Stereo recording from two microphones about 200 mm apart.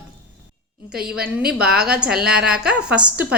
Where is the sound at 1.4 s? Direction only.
5° right (ahead or behind).